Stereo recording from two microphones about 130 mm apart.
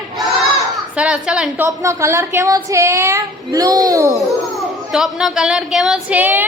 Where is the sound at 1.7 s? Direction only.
25° right (ahead or behind).